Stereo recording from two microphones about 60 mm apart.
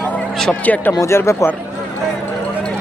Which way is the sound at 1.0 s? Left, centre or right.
Left.